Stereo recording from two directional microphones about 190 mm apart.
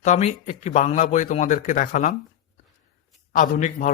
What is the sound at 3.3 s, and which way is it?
Speech, 45° left (ahead or behind).